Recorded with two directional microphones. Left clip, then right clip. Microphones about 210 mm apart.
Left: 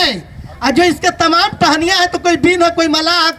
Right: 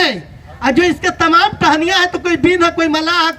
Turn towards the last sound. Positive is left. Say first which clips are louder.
# left 1 dB
turn(degrees=55)  # may be behind; listen again after turning